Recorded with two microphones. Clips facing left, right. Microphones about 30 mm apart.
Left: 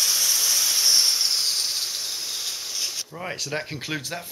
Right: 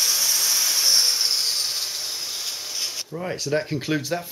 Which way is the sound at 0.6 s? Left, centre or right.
Right.